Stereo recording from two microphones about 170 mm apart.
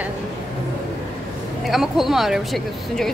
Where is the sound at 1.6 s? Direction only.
Centre (ahead or behind).